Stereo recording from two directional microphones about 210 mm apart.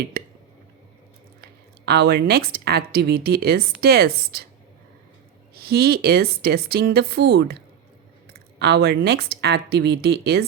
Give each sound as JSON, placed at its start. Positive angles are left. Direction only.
{"t": 0.1, "sound": "a sound", "side_deg": -45}
{"t": 1.4, "sound": "a woman's voice", "side_deg": -50}
{"t": 5.5, "sound": "speech", "side_deg": -45}